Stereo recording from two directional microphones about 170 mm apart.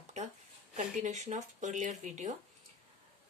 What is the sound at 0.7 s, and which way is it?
Speech, 45° right (ahead or behind).